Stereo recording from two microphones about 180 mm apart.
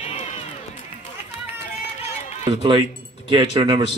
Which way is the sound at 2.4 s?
25° right (ahead or behind).